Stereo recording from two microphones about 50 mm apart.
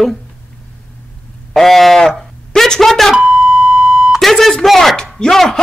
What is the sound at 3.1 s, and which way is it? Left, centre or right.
Beep, centre.